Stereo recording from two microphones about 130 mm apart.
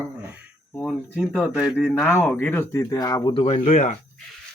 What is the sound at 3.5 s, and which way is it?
Speech, 65° left (ahead or behind).